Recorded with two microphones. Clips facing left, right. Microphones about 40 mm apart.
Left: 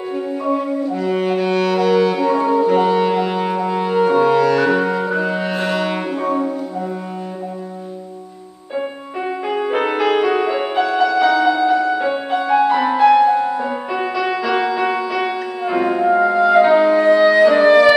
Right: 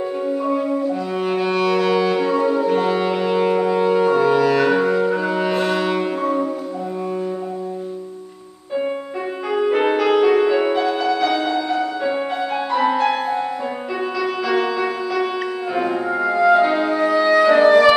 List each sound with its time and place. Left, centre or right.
0.5 s music: centre
2.3 s music: centre
4.8 s music: centre
9.5 s music: centre
10.8 s music: left; by 13.2 s centre
14.2 s music: left
17.4 s music: centre